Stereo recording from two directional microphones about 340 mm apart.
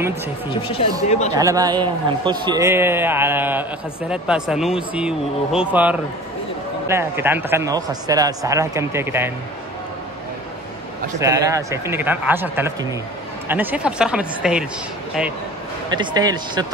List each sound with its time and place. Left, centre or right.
0.6 s speech: centre
1.3 s speech: centre
11.1 s speech: centre
15.9 s speech: centre